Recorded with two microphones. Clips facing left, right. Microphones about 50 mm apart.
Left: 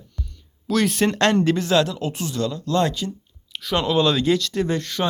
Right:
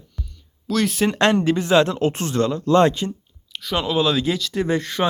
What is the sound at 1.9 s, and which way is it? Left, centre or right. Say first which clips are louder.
Speech: right 6 dB; right.